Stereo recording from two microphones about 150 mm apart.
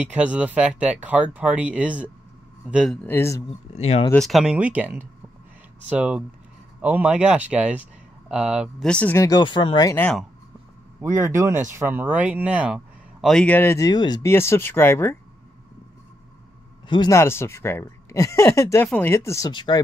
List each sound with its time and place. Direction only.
0.0 s speech: 10° right (ahead or behind)
2.9 s speech: 10° left (ahead or behind)
3.4 s speech: 45° left (ahead or behind)
4.1 s speech: centre (ahead or behind)
8.8 s speech: 10° left (ahead or behind)
9.2 s speech: 30° left (ahead or behind)
11.2 s speech: 15° right (ahead or behind); by 14.3 s 30° left (ahead or behind)
14.3 s speech: 15° left (ahead or behind)
16.8 s speech: 30° left (ahead or behind)
17.1 s speech: 15° left (ahead or behind)
19.5 s speech: 30° left (ahead or behind)